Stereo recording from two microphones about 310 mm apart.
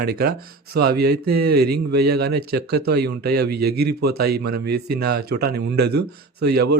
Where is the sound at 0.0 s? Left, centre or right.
Right.